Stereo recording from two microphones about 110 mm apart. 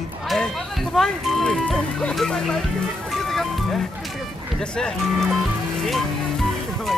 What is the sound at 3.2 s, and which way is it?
Music, centre (ahead or behind).